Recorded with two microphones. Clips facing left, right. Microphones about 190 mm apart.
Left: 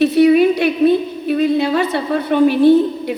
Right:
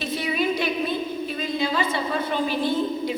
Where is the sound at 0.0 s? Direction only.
65° left (ahead or behind).